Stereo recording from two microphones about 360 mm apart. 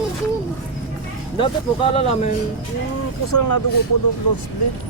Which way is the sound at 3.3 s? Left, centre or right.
Left.